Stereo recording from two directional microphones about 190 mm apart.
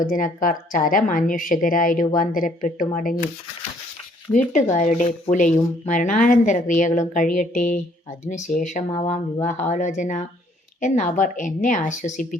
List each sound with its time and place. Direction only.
0.0 s a woman's voice: 45° left (ahead or behind)
4.3 s speech: 20° left (ahead or behind)
4.7 s speech: 40° left (ahead or behind)